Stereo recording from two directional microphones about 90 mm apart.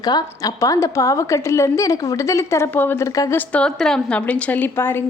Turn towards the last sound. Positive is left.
turn(degrees=25)  # may be behind; listen again after turning